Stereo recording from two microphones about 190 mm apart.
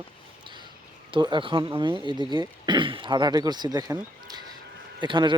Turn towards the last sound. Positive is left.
turn(degrees=-25)  # may be behind; listen again after turning